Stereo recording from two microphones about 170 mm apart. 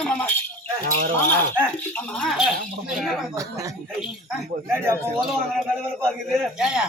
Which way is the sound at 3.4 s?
20° right (ahead or behind).